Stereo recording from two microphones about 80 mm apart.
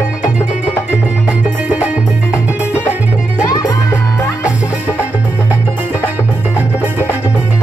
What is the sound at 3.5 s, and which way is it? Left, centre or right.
Music, left.